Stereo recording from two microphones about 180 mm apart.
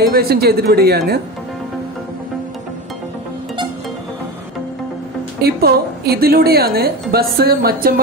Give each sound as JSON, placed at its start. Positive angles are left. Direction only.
{"t": 0.1, "sound": "a woman's voice", "side_deg": -60}
{"t": 5.4, "sound": "a woman's voice", "side_deg": -60}